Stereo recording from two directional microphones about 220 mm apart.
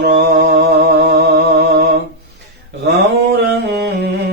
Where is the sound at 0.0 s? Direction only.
45° right (ahead or behind).